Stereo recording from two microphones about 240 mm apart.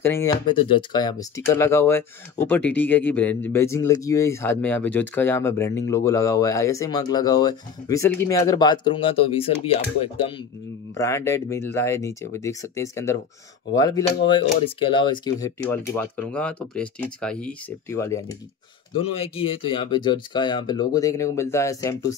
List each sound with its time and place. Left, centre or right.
0.0 s speech: centre
11.0 s speech: centre
19.1 s speech: left